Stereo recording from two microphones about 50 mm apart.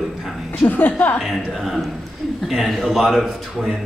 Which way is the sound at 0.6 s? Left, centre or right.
Left.